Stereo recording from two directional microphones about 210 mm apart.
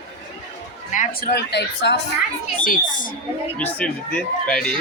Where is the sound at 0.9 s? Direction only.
35° left (ahead or behind); by 2.0 s 55° left (ahead or behind).